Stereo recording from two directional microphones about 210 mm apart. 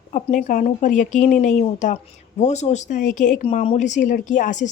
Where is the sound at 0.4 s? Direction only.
35° left (ahead or behind).